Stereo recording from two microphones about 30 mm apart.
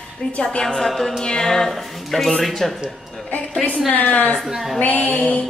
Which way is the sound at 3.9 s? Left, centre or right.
Left.